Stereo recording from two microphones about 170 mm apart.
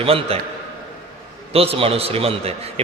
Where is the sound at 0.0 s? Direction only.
35° right (ahead or behind).